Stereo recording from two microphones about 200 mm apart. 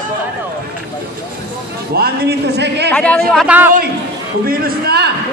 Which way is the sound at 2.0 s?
55° right (ahead or behind).